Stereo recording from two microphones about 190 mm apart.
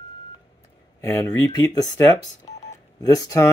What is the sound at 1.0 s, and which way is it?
Speech, 20° left (ahead or behind).